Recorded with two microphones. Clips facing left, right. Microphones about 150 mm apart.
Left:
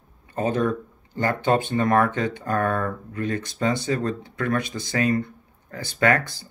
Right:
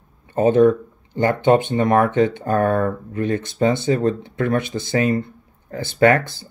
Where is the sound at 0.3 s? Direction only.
25° right (ahead or behind).